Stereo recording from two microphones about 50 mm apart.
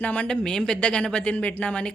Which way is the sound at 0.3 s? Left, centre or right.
Centre.